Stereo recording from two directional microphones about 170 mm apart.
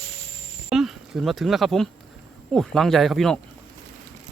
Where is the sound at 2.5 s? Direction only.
Centre (ahead or behind).